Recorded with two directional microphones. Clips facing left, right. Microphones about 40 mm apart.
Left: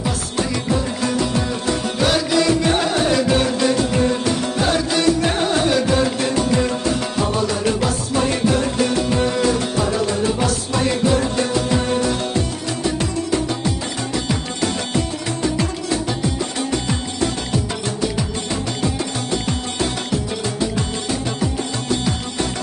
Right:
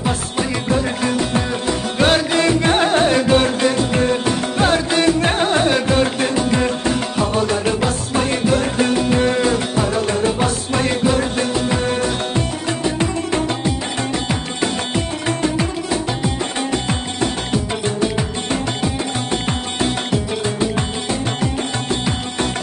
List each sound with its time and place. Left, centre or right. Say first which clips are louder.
2.0 s music: right 3 dB; right
4.6 s music: right 5 dB; right
12.4 s music: right 2 dB; right
17.5 s music: right 2 dB; right